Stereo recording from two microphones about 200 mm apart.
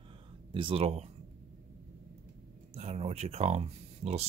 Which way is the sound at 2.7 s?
30° right (ahead or behind).